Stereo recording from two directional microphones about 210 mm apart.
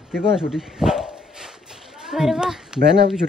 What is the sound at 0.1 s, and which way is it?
Speech, 5° right (ahead or behind).